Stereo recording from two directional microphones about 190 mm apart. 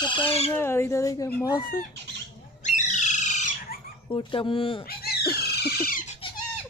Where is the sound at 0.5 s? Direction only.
15° left (ahead or behind).